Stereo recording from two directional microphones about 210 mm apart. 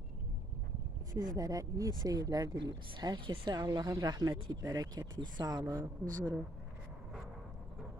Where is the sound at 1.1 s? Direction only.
20° right (ahead or behind).